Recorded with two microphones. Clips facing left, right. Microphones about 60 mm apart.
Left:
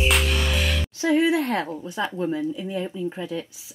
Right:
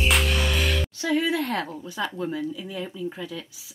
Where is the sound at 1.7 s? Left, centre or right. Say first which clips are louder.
Left 3 dB; centre.